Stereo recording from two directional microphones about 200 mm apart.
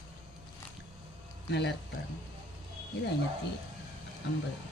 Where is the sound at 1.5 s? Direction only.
60° left (ahead or behind).